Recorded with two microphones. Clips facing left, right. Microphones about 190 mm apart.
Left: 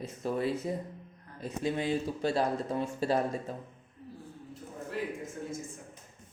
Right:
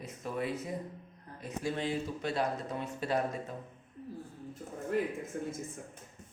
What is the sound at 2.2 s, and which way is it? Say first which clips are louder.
Speech: left 4 dB; 30° left (ahead or behind).